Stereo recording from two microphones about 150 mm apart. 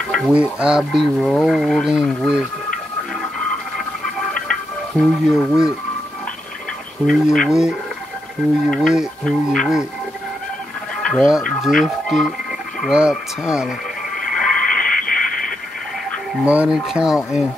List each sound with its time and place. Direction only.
0.3 s speech: 5° right (ahead or behind)
4.3 s a sound: 5° left (ahead or behind)
5.3 s speech: 15° left (ahead or behind)
7.1 s speech: centre (ahead or behind)
11.0 s speech: 5° left (ahead or behind)
14.3 s radio: 5° left (ahead or behind)
16.4 s speech: 5° right (ahead or behind)